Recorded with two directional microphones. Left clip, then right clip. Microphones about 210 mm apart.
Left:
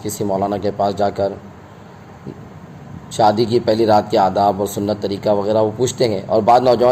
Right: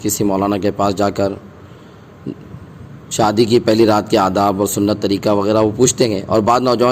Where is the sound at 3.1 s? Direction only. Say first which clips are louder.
Right 1 dB; 50° right (ahead or behind).